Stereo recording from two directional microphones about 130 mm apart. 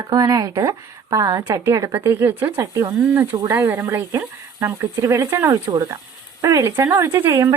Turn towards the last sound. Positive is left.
turn(degrees=-20)  # may be behind; listen again after turning